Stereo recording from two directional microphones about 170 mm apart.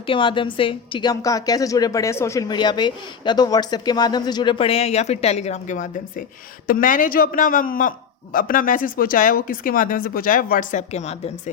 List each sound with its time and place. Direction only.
0.0 s a man's voice: 30° left (ahead or behind)